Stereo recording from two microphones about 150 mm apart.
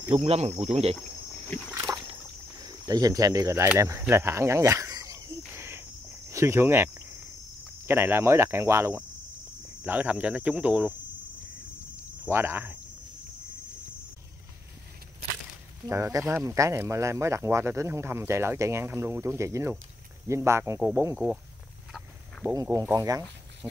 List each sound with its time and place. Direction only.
0.1 s speech: 45° right (ahead or behind)
1.9 s a sound: 25° right (ahead or behind)
2.6 s speech: 25° right (ahead or behind)
4.1 s cricket: 20° right (ahead or behind)
6.3 s speech: 20° right (ahead or behind)
12.3 s speech: 15° right (ahead or behind)
15.8 s speech: 20° right (ahead or behind)
22.4 s speech: 20° right (ahead or behind)
23.6 s speech: 10° right (ahead or behind)